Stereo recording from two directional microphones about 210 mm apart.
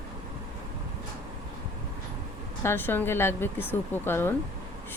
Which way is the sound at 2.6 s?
10° left (ahead or behind).